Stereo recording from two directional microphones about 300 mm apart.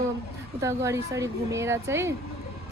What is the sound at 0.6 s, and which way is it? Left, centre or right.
A woman's voice, centre.